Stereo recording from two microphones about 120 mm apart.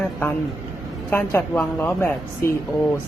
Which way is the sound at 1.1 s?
20° left (ahead or behind).